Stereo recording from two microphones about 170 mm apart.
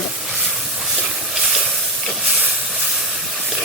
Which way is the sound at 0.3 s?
Centre (ahead or behind).